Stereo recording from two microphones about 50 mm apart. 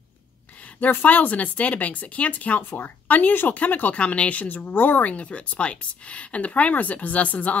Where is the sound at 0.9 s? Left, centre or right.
Left.